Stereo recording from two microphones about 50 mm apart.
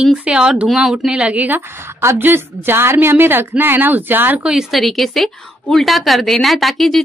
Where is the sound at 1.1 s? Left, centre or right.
Right.